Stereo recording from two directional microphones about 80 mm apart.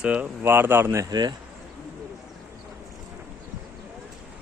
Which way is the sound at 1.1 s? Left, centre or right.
Right.